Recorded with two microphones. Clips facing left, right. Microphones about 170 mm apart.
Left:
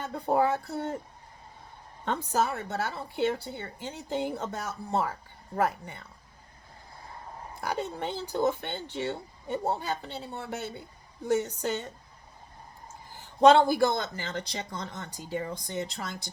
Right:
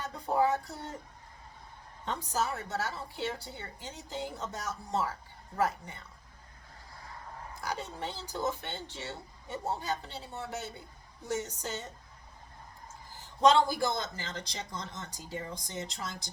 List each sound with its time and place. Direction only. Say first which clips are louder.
0.1 s a sound: left 3 dB; 55° left (ahead or behind)
2.0 s a woman's voice: left 5 dB; 55° left (ahead or behind)
7.6 s a woman's voice: left 6 dB; 55° left (ahead or behind)
13.4 s a woman's voice: left 5 dB; 60° left (ahead or behind)